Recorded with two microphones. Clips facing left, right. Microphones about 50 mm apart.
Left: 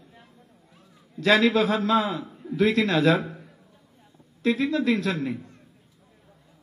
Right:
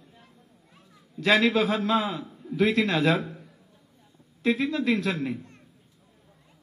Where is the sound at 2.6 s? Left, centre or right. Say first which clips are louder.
Left 2 dB; right.